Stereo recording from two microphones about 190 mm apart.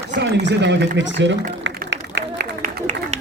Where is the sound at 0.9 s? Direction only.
70° right (ahead or behind).